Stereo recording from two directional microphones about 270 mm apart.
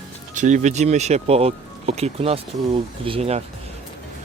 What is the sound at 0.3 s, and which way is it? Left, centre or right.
Speech, right.